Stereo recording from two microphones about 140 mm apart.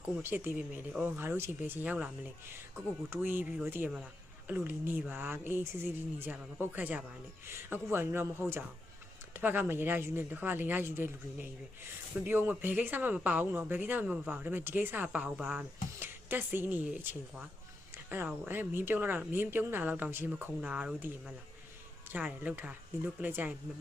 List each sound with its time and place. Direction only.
0.2 s speech: 15° right (ahead or behind)
17.9 s music: 15° right (ahead or behind)
18.4 s speech: 15° right (ahead or behind)